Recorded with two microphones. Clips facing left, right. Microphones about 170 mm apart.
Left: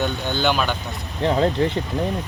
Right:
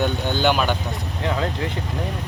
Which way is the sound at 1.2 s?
30° left (ahead or behind).